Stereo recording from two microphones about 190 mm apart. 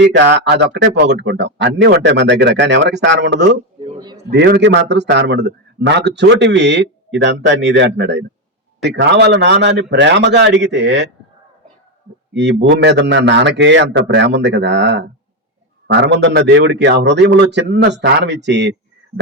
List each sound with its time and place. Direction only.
0.0 s a man's voice: 65° right (ahead or behind)
3.9 s a sound: 20° right (ahead or behind)
4.3 s a man's voice: 60° right (ahead or behind)
12.3 s a man's voice: 65° right (ahead or behind)